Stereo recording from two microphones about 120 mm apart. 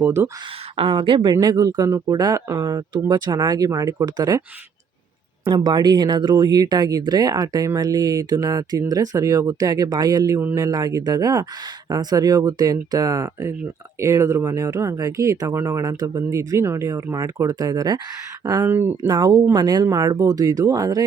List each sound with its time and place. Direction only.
0.0 s speech: 20° right (ahead or behind)
0.8 s speech: 45° right (ahead or behind)
5.5 s speech: 35° right (ahead or behind)
18.6 s speech: 20° right (ahead or behind)
19.0 s speech: 35° right (ahead or behind)